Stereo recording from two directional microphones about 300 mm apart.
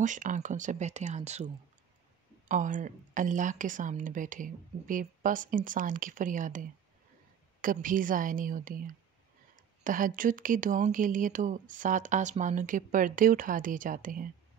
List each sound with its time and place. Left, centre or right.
0.0 s speech: right